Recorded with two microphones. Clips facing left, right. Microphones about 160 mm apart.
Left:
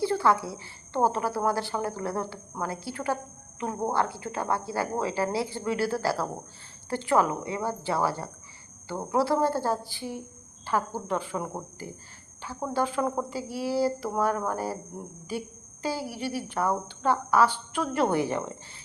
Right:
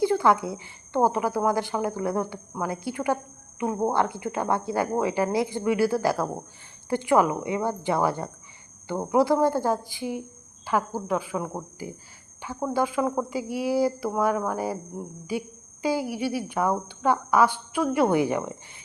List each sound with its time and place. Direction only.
0.0 s a woman's voice: 15° right (ahead or behind)
12.4 s cricket: 15° right (ahead or behind)
12.6 s a woman's voice: 10° right (ahead or behind)